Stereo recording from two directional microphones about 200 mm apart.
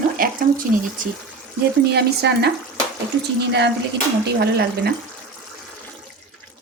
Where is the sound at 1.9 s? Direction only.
55° right (ahead or behind).